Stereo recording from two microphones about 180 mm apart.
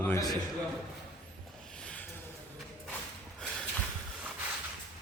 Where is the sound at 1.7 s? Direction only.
5° left (ahead or behind).